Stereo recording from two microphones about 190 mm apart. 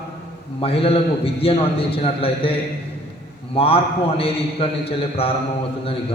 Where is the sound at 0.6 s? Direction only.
30° left (ahead or behind).